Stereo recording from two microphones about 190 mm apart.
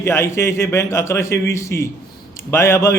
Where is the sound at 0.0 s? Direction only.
15° left (ahead or behind).